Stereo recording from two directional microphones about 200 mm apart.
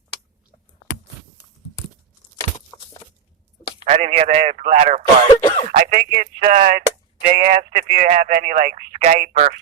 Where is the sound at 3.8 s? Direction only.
35° right (ahead or behind).